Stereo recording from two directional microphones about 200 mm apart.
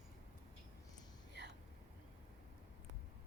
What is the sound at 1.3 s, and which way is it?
Whispering, 60° right (ahead or behind).